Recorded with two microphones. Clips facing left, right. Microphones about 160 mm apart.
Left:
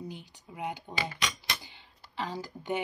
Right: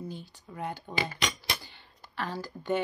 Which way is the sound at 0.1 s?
15° left (ahead or behind).